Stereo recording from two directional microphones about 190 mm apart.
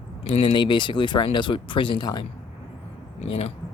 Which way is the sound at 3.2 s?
35° left (ahead or behind).